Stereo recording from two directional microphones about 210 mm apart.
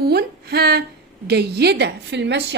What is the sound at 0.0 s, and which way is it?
A woman's voice, 50° right (ahead or behind).